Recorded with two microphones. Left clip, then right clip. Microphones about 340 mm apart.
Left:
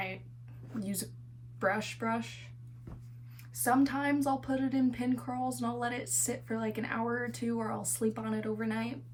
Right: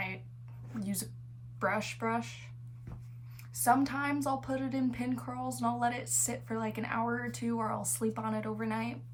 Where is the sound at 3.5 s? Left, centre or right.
Centre.